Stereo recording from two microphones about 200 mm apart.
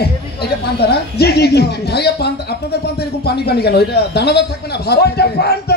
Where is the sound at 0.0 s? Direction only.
55° left (ahead or behind).